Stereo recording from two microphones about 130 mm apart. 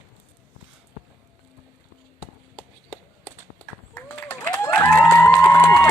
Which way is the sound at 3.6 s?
10° left (ahead or behind).